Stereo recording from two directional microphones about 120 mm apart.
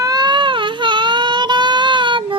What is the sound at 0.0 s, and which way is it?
Baby cry, 35° right (ahead or behind).